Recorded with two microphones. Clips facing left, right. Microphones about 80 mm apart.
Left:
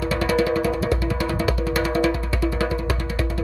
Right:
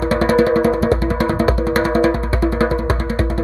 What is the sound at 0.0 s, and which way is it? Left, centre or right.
Music, right.